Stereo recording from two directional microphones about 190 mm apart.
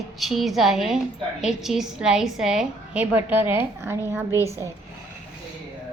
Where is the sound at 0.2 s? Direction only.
Centre (ahead or behind).